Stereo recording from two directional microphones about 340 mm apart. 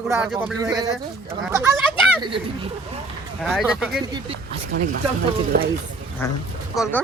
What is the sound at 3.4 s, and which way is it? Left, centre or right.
Speech, centre.